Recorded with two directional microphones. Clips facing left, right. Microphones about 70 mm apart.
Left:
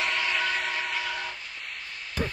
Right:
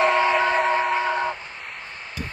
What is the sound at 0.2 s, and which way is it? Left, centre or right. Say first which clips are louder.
Train: right 9 dB; right.